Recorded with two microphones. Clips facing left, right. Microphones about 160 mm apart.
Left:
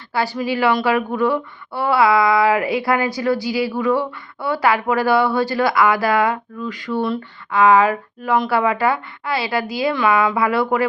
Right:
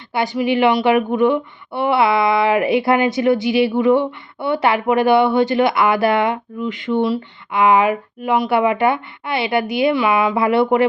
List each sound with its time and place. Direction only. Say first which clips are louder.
0.1 s speech: right 3 dB; 20° right (ahead or behind)